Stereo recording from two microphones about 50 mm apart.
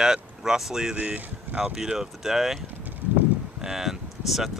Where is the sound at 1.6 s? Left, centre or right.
Centre.